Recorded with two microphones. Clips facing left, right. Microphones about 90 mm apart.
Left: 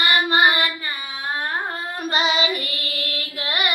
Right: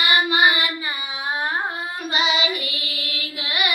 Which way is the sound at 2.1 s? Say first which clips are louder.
Left 1 dB; 40° left (ahead or behind).